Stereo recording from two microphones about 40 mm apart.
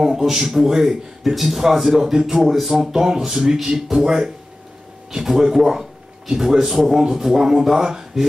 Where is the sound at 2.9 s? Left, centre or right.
Centre.